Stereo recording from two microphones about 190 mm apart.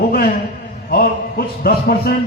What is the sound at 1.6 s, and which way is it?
Speech, 50° left (ahead or behind).